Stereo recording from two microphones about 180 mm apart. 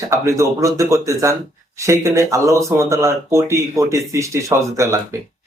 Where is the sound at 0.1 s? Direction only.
15° right (ahead or behind).